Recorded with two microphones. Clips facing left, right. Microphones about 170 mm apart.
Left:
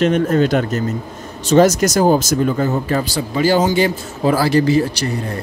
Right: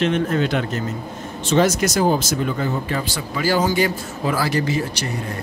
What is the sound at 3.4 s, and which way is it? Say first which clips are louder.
A man's voice: left 4 dB; 20° left (ahead or behind).